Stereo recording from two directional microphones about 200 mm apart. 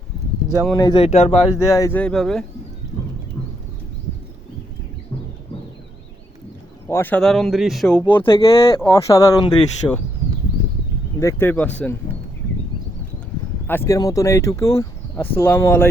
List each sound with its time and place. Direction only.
0.8 s speech: 25° left (ahead or behind)
1.5 s speech: 15° left (ahead or behind)
6.8 s speech: 10° left (ahead or behind)
8.3 s speech: 15° left (ahead or behind)
8.5 s speech: 25° left (ahead or behind)
8.9 s speech: 15° left (ahead or behind)
11.2 s speech: 15° left (ahead or behind)
13.7 s speech: 15° left (ahead or behind)